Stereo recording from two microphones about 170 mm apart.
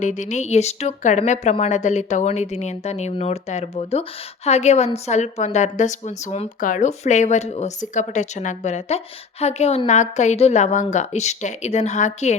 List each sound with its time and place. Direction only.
0.0 s speech: 45° left (ahead or behind)